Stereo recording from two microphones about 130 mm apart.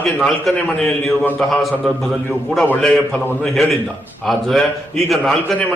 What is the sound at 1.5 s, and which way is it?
A man's voice, centre (ahead or behind).